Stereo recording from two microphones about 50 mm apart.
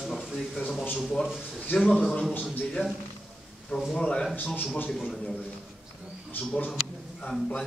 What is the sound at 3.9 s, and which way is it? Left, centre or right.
Speech, centre.